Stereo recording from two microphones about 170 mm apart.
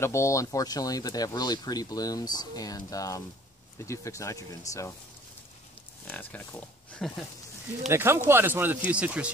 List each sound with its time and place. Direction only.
0.0 s speech: 15° left (ahead or behind)
6.0 s speech: 10° left (ahead or behind)
7.9 s speech: 15° right (ahead or behind)